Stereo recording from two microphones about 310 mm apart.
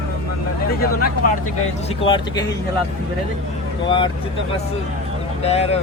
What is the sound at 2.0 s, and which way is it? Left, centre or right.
Speech, centre.